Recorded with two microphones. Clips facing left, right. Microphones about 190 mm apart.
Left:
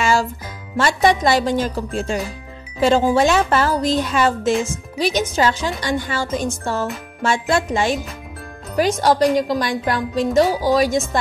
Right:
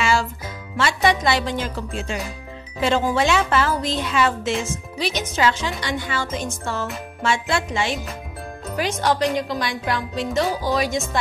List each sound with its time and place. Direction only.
0.0 s music: 40° left (ahead or behind)
0.7 s speech: 40° left (ahead or behind)
3.2 s speech: 40° left (ahead or behind)